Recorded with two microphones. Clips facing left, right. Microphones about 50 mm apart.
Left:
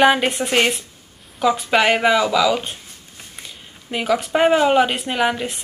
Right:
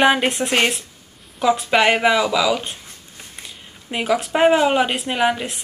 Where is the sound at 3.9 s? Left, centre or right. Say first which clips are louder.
Even; centre.